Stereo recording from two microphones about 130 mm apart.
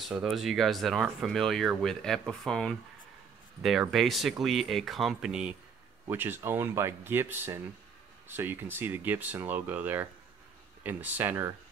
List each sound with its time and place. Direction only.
0.1 s speech: centre (ahead or behind)
3.9 s speech: centre (ahead or behind); by 11.5 s 20° right (ahead or behind)